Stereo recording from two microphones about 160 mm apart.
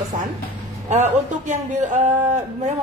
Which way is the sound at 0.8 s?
50° right (ahead or behind).